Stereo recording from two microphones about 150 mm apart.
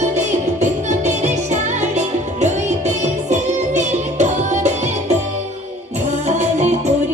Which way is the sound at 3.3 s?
50° right (ahead or behind).